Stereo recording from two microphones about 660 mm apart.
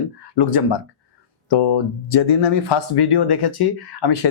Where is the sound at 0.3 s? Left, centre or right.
Left.